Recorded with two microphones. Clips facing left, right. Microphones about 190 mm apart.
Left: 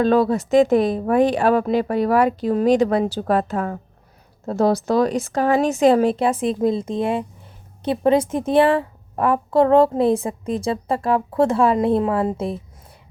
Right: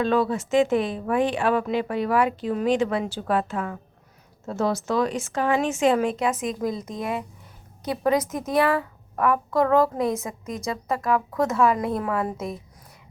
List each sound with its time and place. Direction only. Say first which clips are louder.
0.0 s a woman's voice: left 5 dB; 40° left (ahead or behind)